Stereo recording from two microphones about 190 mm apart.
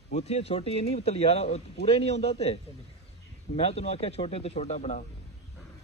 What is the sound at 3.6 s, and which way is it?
Speech, 30° left (ahead or behind).